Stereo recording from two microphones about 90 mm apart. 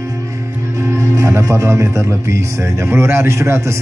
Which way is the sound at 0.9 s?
35° right (ahead or behind).